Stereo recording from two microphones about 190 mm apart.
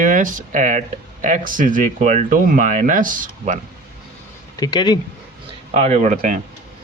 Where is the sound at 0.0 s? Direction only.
45° right (ahead or behind).